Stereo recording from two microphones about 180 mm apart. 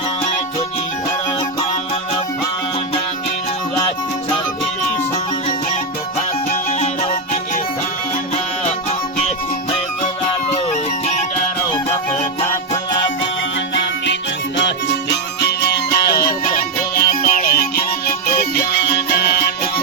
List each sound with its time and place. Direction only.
6.5 s music: 40° left (ahead or behind)
10.5 s music: 40° left (ahead or behind)
12.5 s music: 20° left (ahead or behind)
13.7 s music: 80° left
15.4 s music: 65° left (ahead or behind)
18.7 s music: 65° left (ahead or behind)